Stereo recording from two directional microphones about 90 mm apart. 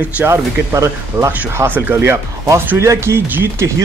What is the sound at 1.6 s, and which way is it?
Speech, 20° right (ahead or behind).